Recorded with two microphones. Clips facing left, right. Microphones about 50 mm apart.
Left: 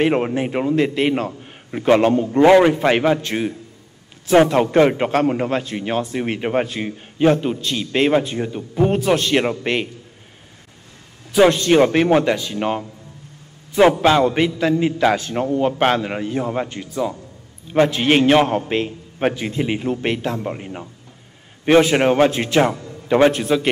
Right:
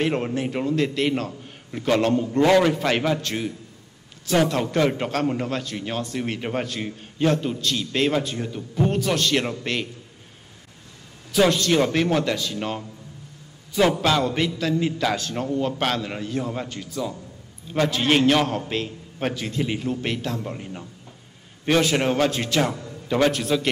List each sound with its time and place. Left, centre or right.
0.0 s a man's voice: left
11.3 s a man's voice: left
14.0 s a man's voice: left